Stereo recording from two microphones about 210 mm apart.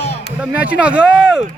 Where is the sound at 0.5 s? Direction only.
5° right (ahead or behind).